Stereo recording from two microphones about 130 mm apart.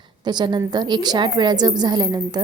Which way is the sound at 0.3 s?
35° right (ahead or behind).